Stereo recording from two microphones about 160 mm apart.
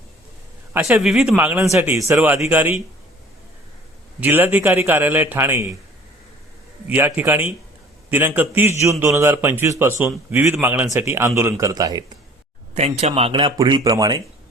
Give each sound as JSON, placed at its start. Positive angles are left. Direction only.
{"t": 0.7, "sound": "speech", "side_deg": -15}
{"t": 1.0, "sound": "a man's voice", "side_deg": 0}
{"t": 4.2, "sound": "a man's voice", "side_deg": -10}
{"t": 6.8, "sound": "a man's voice", "side_deg": -10}
{"t": 12.7, "sound": "speech", "side_deg": -40}